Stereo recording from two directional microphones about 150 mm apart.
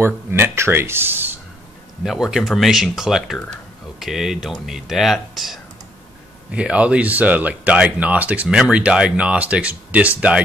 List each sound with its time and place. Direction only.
0.0 s speech: 15° right (ahead or behind)
2.0 s speech: centre (ahead or behind)